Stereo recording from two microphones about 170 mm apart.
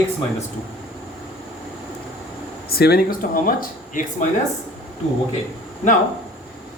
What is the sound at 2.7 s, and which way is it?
Speech, 65° left (ahead or behind).